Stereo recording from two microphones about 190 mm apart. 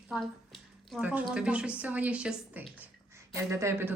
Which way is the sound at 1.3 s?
5° right (ahead or behind).